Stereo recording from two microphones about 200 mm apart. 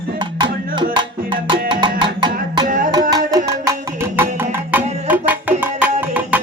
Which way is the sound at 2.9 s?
20° right (ahead or behind).